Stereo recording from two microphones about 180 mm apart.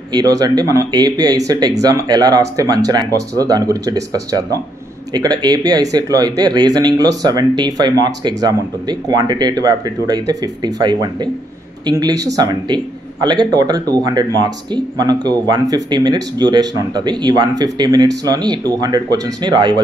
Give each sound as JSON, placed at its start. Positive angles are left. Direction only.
{"t": 0.1, "sound": "speech", "side_deg": -20}